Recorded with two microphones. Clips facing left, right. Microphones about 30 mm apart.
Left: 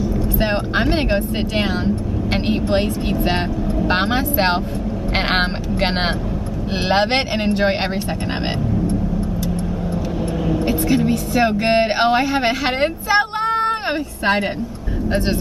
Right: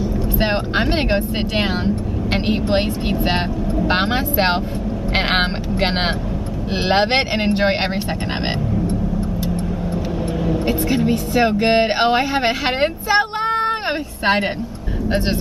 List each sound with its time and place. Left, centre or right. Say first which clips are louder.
0.4 s speech: right 1 dB; centre
10.4 s speech: even; centre